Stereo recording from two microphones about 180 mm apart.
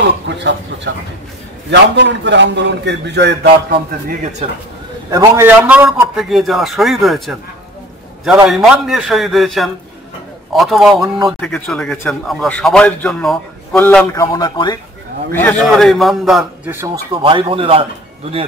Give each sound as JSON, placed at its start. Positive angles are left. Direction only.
{"t": 0.9, "sound": "a man's voice", "side_deg": -75}
{"t": 4.1, "sound": "speech", "side_deg": -40}
{"t": 5.1, "sound": "a man's voice", "side_deg": -15}
{"t": 5.9, "sound": "a man's voice", "side_deg": 0}
{"t": 8.5, "sound": "a man's voice", "side_deg": 0}
{"t": 13.8, "sound": "speech", "side_deg": 15}
{"t": 15.3, "sound": "a man's voice", "side_deg": 5}
{"t": 16.8, "sound": "speech", "side_deg": -25}